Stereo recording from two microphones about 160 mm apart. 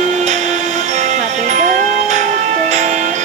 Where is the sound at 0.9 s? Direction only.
50° right (ahead or behind).